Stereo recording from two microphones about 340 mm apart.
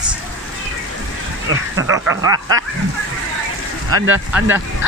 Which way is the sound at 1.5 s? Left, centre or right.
Right.